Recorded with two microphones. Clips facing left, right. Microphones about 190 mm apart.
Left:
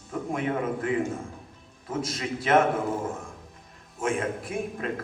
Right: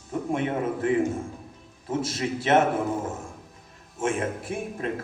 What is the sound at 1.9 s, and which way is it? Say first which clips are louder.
Speech: right 3 dB; 30° right (ahead or behind).